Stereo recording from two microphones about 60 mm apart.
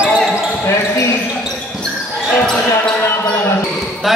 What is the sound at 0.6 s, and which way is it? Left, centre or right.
Speech, left.